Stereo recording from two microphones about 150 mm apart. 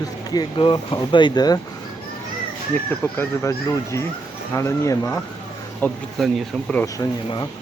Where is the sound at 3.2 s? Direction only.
20° left (ahead or behind).